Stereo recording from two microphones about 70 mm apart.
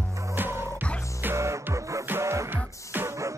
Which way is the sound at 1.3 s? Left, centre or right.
Right.